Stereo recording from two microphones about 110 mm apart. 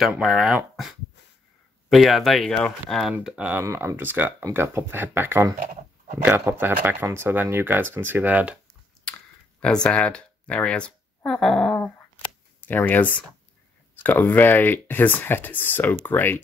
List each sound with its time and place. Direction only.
0.1 s speech: 5° right (ahead or behind)
3.3 s speech: 10° right (ahead or behind)
3.6 s speech: 20° right (ahead or behind)
9.1 s a sound: 10° left (ahead or behind)
9.6 s speech: 10° left (ahead or behind)
12.5 s speech: 15° left (ahead or behind)